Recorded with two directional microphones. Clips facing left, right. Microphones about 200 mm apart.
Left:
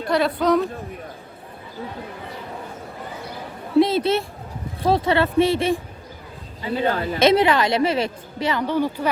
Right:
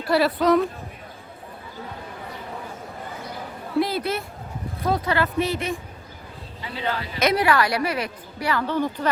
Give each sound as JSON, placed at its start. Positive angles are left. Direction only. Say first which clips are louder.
{"t": 0.1, "sound": "a woman's voice", "louder": "even", "side_deg": -5}
{"t": 3.8, "sound": "a woman's voice", "louder": "left 6 dB", "side_deg": 25}
{"t": 6.7, "sound": "a man's voice", "louder": "left 7 dB", "side_deg": 50}
{"t": 7.2, "sound": "a woman's voice", "louder": "left 4 dB", "side_deg": 25}